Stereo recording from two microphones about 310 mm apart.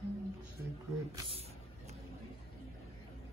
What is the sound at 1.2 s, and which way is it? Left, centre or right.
Speech, centre.